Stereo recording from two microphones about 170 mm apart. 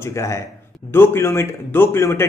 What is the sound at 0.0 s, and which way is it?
A man's voice, 15° left (ahead or behind).